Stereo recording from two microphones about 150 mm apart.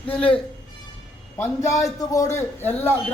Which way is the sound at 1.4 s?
20° left (ahead or behind).